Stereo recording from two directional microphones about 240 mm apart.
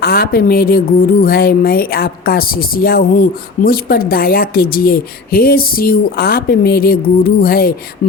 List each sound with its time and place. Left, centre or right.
0.0 s a woman's voice: left